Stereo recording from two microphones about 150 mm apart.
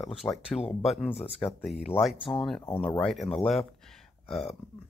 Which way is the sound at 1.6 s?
5° right (ahead or behind).